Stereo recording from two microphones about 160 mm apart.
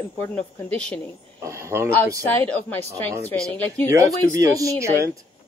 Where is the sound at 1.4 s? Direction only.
15° right (ahead or behind).